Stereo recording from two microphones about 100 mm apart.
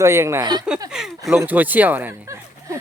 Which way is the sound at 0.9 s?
5° right (ahead or behind).